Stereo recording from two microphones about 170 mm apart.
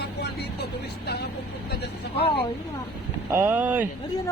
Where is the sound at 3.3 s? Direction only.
15° right (ahead or behind).